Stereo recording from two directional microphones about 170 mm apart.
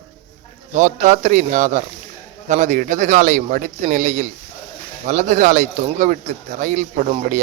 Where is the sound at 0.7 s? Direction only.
45° right (ahead or behind).